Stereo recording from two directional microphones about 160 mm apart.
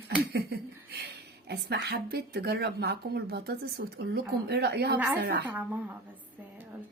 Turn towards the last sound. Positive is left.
turn(degrees=-90)